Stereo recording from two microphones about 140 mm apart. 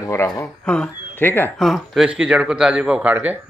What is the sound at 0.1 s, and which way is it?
Speech, 15° left (ahead or behind).